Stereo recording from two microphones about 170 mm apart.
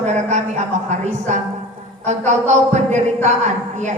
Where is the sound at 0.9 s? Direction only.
45° right (ahead or behind).